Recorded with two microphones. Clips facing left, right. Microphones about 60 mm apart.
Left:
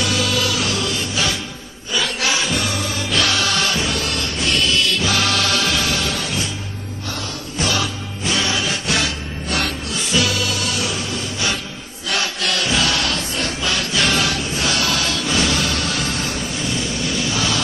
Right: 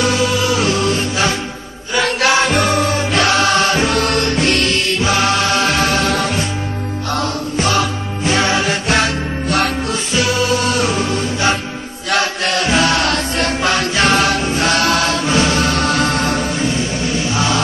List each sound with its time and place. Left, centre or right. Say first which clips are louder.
0.0 s music: right 5 dB; right
2.0 s music: right 7 dB; right
7.5 s music: right 4 dB; right
12.1 s mantra: right 5 dB; right
13.1 s music: right 6 dB; right
16.6 s music: right 5 dB; right